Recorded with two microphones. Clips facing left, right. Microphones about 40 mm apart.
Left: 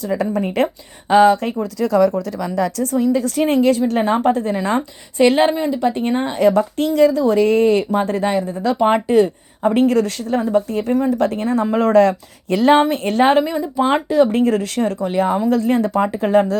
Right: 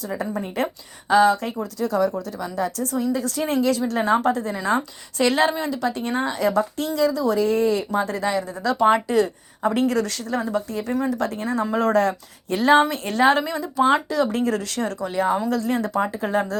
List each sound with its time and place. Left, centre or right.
0.1 s a woman's voice: left
1.8 s speech: left
2.8 s a woman's voice: left
5.1 s speech: left
6.4 s a woman's voice: left
11.9 s a woman's voice: left
12.9 s speech: left
13.3 s speech: centre
15.0 s a woman's voice: left